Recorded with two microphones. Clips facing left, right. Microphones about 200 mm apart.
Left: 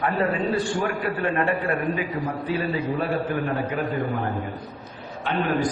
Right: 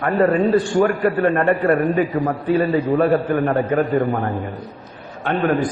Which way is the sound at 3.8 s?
Centre (ahead or behind).